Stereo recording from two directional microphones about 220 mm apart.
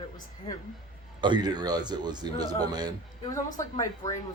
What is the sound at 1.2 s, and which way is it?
A man's voice, 20° right (ahead or behind).